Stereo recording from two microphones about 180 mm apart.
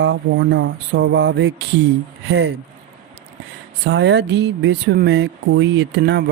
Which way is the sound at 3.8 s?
75° right (ahead or behind).